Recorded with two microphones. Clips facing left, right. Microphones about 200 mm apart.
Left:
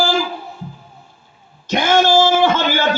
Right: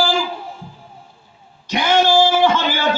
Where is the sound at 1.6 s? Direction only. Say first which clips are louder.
Left 1 dB; 50° left (ahead or behind).